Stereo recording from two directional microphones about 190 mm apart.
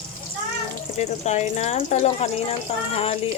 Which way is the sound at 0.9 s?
35° left (ahead or behind).